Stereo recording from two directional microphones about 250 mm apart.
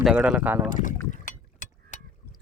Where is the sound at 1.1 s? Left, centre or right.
Left.